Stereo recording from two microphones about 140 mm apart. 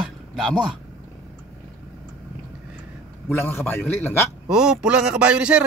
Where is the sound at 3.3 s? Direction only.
15° left (ahead or behind).